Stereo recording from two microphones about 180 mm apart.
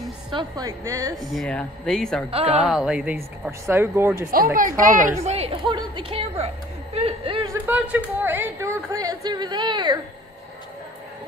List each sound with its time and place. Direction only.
0.3 s speech: 25° right (ahead or behind)
1.1 s speech: centre (ahead or behind)
3.6 s speech: 15° right (ahead or behind)
4.6 s a woman's voice: 50° right (ahead or behind)
5.2 s a woman's voice: 35° right (ahead or behind)
7.6 s speech: 10° right (ahead or behind); by 9.9 s 25° right (ahead or behind)